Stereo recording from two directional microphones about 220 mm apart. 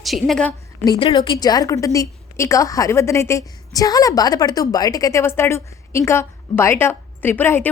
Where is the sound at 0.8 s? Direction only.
15° left (ahead or behind).